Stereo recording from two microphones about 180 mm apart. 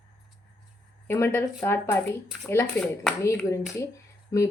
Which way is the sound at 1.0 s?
15° left (ahead or behind).